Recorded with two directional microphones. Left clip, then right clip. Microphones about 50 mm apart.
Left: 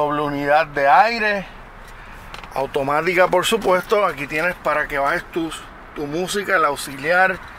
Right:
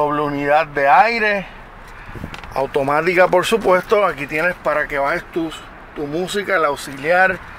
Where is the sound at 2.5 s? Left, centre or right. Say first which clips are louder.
Right 3 dB; centre.